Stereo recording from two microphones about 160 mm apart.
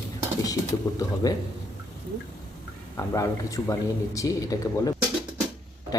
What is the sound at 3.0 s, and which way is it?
A man's voice, 20° left (ahead or behind).